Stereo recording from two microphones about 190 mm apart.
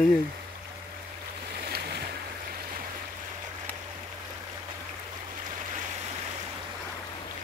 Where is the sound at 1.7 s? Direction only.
55° right (ahead or behind).